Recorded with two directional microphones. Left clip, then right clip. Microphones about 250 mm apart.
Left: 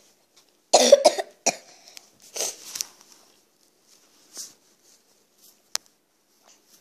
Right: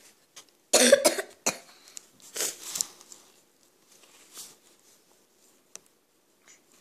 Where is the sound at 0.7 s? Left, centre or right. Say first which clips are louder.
Left 5 dB; centre.